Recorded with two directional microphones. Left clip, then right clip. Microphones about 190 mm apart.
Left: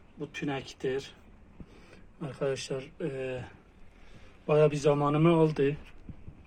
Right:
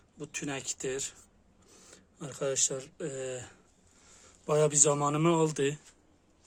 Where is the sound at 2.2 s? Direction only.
15° right (ahead or behind).